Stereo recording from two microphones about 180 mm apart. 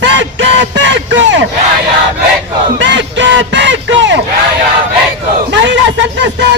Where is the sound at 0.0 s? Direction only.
80° right.